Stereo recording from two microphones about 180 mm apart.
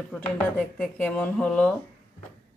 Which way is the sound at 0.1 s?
10° left (ahead or behind).